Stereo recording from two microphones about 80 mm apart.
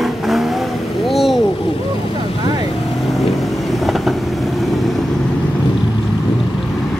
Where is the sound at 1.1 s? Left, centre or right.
Centre.